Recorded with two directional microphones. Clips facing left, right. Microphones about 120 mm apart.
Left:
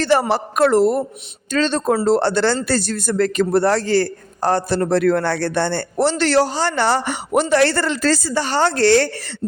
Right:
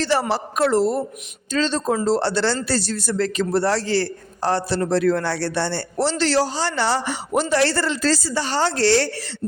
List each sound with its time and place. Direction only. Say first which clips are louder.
0.0 s a woman's voice: left 4 dB; 55° left (ahead or behind)